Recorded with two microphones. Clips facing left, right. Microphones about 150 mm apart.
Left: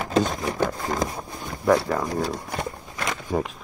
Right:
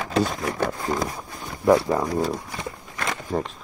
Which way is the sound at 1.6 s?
20° right (ahead or behind).